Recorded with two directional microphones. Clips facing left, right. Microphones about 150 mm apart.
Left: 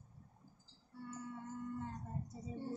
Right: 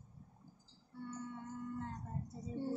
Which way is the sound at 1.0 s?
5° left (ahead or behind).